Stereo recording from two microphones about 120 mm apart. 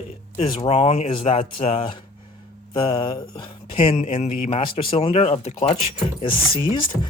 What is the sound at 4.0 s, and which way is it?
Speech, 75° left (ahead or behind).